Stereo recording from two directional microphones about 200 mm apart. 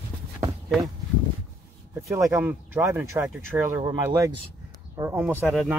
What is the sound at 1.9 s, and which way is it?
Speech, 15° right (ahead or behind).